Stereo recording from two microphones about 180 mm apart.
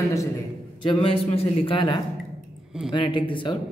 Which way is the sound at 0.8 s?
30° left (ahead or behind).